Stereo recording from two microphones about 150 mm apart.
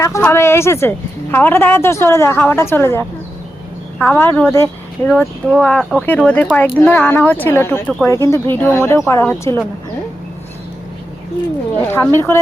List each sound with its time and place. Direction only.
0.0 s a woman's voice: 20° left (ahead or behind)
11.9 s a woman's voice: 15° left (ahead or behind)